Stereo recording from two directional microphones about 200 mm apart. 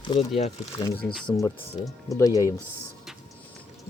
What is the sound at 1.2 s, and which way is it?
Speech, 25° left (ahead or behind).